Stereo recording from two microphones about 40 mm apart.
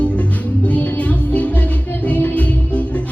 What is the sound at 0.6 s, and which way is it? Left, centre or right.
Music, left.